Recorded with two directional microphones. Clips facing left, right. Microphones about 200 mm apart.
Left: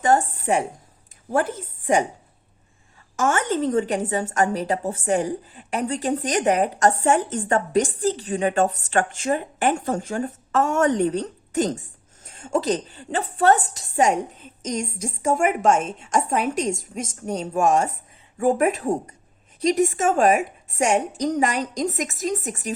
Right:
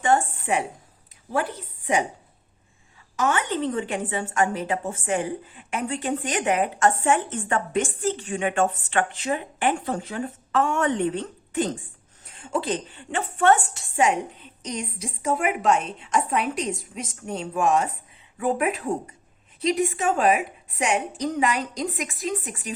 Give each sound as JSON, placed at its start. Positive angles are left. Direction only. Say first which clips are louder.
{"t": 0.0, "sound": "a woman's voice", "louder": "left 2 dB", "side_deg": 40}
{"t": 3.2, "sound": "a woman's voice", "louder": "left 2 dB", "side_deg": 45}